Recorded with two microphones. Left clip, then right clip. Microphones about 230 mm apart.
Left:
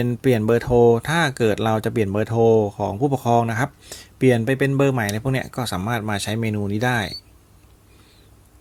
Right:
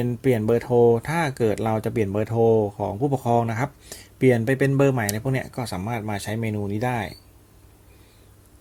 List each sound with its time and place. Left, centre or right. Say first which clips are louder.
0.0 s speech: left 2 dB; centre